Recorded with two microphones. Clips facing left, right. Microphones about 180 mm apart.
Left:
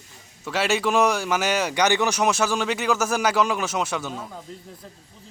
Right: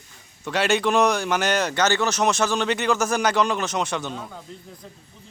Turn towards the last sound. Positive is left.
turn(degrees=5)  # may be behind; listen again after turning